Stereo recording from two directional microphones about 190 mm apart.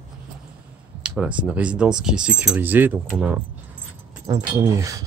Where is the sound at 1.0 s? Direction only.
5° right (ahead or behind).